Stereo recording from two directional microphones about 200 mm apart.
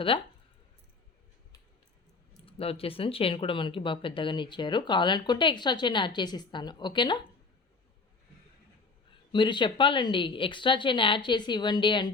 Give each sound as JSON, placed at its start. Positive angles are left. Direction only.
{"t": 0.1, "sound": "speech", "side_deg": 25}
{"t": 2.5, "sound": "speech", "side_deg": 30}
{"t": 9.3, "sound": "speech", "side_deg": 25}